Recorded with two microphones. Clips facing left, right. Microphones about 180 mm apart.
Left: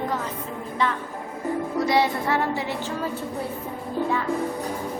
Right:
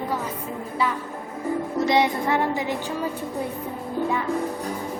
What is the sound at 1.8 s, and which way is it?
A woman's voice, 20° right (ahead or behind).